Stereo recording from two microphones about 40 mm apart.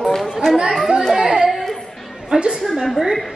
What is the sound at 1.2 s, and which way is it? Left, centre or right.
Speech, right.